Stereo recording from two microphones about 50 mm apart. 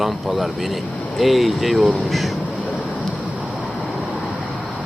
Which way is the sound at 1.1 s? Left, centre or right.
Centre.